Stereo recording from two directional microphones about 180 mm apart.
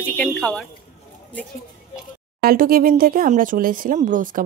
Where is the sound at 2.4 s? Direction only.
50° right (ahead or behind).